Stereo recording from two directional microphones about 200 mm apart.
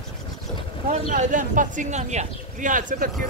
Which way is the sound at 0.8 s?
40° right (ahead or behind).